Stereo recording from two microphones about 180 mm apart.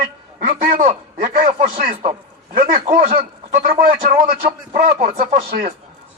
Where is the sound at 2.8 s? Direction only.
35° right (ahead or behind).